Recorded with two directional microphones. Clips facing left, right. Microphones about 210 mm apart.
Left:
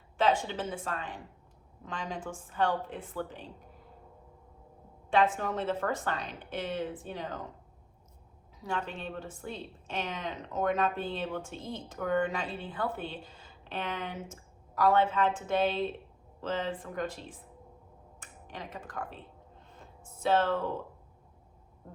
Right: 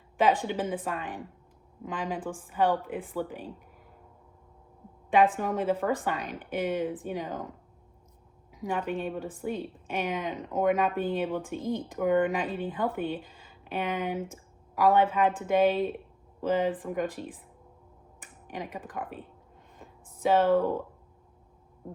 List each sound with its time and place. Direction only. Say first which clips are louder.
0.2 s speech: right 3 dB; 15° right (ahead or behind)
5.4 s speech: right 4 dB; 10° right (ahead or behind)
8.5 s speech: right 5 dB; 15° right (ahead or behind)
13.3 s a sound: right 5 dB; 10° right (ahead or behind)
14.8 s speech: right 3 dB; 15° right (ahead or behind)
18.5 s speech: right 5 dB; 15° right (ahead or behind)
19.8 s a sound: right 4 dB; 15° right (ahead or behind)